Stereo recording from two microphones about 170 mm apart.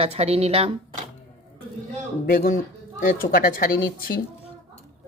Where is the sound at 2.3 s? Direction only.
55° left (ahead or behind).